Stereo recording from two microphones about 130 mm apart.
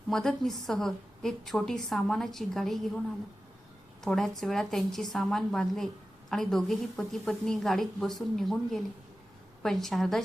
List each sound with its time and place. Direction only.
0.1 s a woman's voice: 5° left (ahead or behind)
4.0 s a woman's voice: centre (ahead or behind)